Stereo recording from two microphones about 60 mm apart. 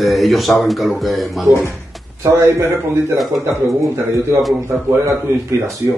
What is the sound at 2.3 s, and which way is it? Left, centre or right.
Speech, right.